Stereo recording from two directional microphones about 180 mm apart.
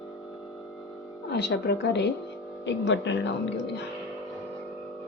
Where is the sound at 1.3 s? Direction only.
70° left (ahead or behind).